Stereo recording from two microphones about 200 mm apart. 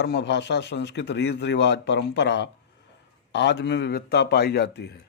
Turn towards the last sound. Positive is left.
turn(degrees=55)  # may be behind; listen again after turning